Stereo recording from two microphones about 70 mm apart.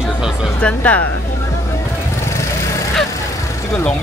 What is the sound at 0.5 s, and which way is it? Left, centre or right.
Speech, centre.